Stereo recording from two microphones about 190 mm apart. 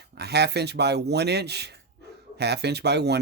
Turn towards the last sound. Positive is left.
turn(degrees=-60)  # may be behind; listen again after turning